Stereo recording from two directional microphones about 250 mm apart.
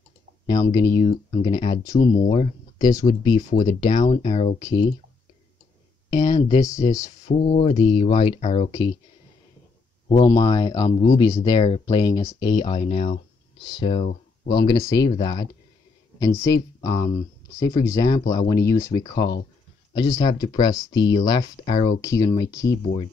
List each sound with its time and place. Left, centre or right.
0.5 s speech: centre
2.8 s speech: centre
3.3 s speech: left
6.0 s speech: centre
7.2 s speech: left
10.2 s speech: centre
19.1 s speech: left
19.9 s speech: centre